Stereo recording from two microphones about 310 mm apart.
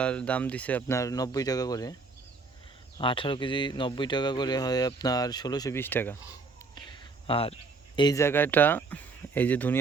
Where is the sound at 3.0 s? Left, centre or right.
Centre.